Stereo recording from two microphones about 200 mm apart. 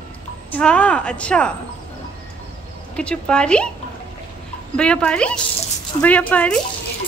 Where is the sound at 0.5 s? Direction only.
5° left (ahead or behind).